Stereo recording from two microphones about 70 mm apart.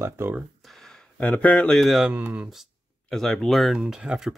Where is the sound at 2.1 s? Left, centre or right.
Right.